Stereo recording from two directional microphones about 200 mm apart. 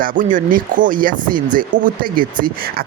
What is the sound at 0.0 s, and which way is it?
Speech, 40° right (ahead or behind).